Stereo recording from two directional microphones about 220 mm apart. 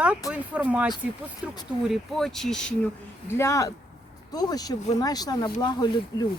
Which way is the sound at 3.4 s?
15° left (ahead or behind).